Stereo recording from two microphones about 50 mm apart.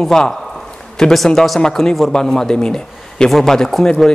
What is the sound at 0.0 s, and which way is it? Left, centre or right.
A man's voice, centre.